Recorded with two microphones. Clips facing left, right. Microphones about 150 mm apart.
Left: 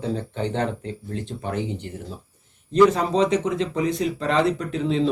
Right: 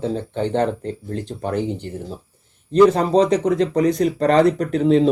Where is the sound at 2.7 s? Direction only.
35° right (ahead or behind).